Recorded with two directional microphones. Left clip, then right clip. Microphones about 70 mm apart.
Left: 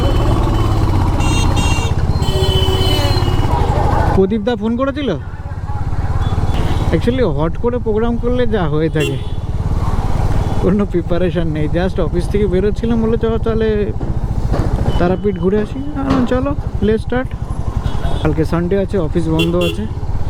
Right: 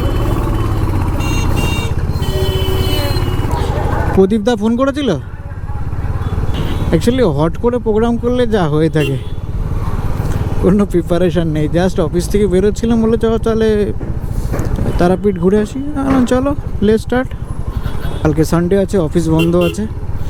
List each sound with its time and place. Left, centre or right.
0.0 s music: left
4.2 s speech: right
6.9 s speech: right
9.8 s vehicle: left
10.7 s speech: right
14.7 s vehicle: left
14.9 s speech: right